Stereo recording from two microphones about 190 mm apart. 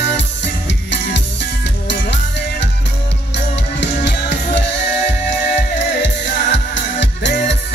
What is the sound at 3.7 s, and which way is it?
Music, 65° left (ahead or behind).